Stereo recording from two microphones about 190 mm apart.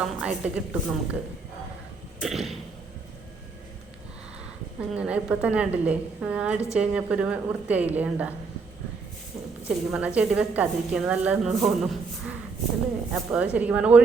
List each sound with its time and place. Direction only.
0.0 s a woman's voice: 5° right (ahead or behind)
2.2 s a woman's voice: centre (ahead or behind)
4.8 s a woman's voice: 5° right (ahead or behind)
9.6 s a woman's voice: 5° right (ahead or behind)